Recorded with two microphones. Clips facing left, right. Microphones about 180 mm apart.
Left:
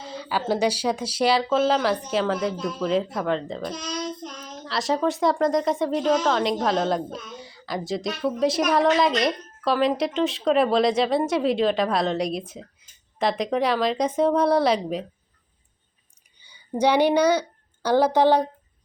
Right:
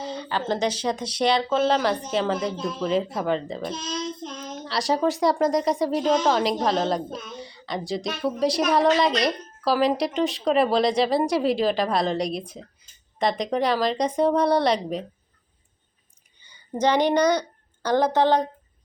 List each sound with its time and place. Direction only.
0.0 s speech: 5° left (ahead or behind)
3.7 s child singing: 25° right (ahead or behind)
4.6 s speech: centre (ahead or behind)
16.5 s a woman's voice: 10° left (ahead or behind)